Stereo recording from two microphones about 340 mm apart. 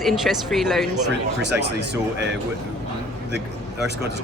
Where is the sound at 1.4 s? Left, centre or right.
Right.